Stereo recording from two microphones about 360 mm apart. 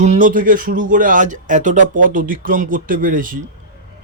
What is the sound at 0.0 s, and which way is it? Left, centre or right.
A man's voice, centre.